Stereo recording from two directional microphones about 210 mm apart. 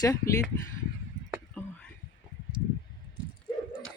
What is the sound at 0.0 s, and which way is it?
Speech, 15° left (ahead or behind).